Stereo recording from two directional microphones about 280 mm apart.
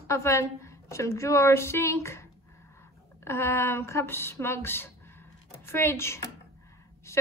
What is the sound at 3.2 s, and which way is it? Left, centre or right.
Speech, centre.